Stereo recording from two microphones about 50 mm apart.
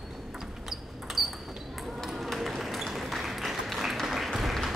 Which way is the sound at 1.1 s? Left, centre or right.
Centre.